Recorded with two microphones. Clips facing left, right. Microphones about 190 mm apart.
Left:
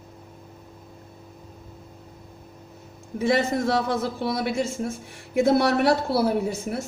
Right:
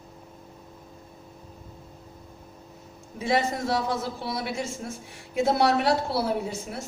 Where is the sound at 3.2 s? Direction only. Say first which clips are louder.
Left 4 dB; 50° left (ahead or behind).